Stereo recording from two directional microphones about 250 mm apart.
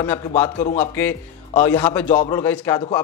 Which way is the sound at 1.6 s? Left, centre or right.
Centre.